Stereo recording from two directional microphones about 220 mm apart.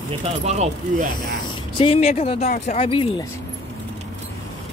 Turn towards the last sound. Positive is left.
turn(degrees=25)  # may be behind; listen again after turning